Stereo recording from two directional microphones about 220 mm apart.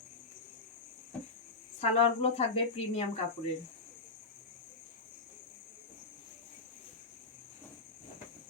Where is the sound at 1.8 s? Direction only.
25° left (ahead or behind).